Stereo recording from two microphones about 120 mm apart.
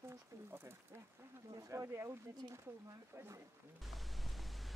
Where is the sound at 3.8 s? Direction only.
Centre (ahead or behind).